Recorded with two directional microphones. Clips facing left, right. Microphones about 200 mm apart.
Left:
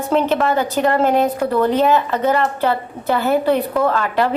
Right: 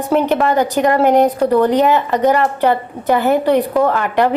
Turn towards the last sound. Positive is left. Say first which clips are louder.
# right 3 dB
turn(degrees=-15)  # may be behind; listen again after turning